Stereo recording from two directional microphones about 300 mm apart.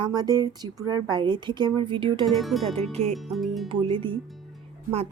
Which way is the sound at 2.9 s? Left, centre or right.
Right.